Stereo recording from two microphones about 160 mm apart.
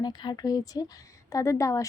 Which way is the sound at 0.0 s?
25° left (ahead or behind).